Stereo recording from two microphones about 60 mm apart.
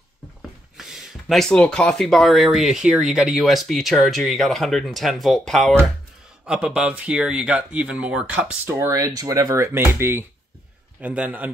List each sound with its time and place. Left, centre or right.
0.7 s a sound: centre
1.7 s speech: centre
6.4 s speech: centre
8.6 s speech: right
8.9 s speech: right
9.7 s speech: right
11.0 s a man's voice: right